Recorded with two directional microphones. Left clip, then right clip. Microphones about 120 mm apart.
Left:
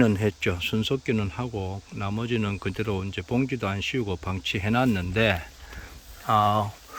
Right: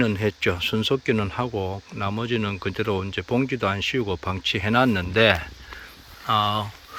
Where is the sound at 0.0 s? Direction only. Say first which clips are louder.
Right 1 dB; 30° left (ahead or behind).